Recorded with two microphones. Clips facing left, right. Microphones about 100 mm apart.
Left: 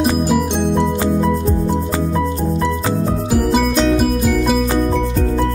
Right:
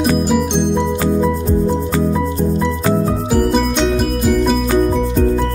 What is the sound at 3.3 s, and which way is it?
Music, centre (ahead or behind).